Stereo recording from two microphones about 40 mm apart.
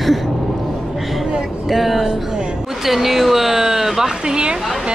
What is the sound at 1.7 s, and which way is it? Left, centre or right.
Speech, centre.